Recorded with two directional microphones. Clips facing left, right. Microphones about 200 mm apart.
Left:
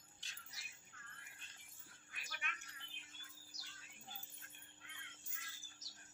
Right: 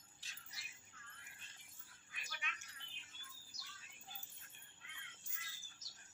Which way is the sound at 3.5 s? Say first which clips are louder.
Even; 40° left (ahead or behind).